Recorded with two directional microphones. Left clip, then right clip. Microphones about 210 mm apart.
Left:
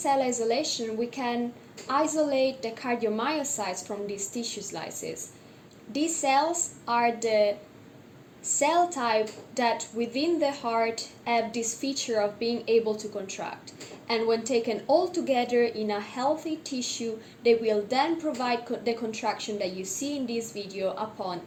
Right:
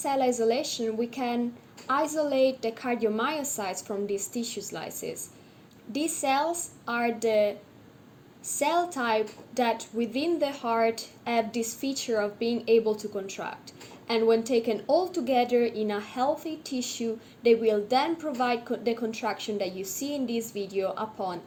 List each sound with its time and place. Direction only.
0.0 s a woman's voice: 50° right (ahead or behind)
8.5 s a woman's voice: 50° right (ahead or behind)